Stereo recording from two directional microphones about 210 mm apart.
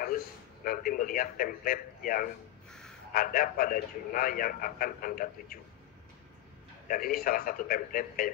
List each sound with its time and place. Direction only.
0.7 s a man's voice: 40° left (ahead or behind)
2.7 s a sound: 5° left (ahead or behind)
3.1 s a man's voice: 40° left (ahead or behind)
6.9 s a man's voice: 40° left (ahead or behind)